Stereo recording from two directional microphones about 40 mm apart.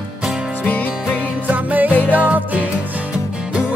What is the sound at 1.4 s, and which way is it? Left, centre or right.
Music, right.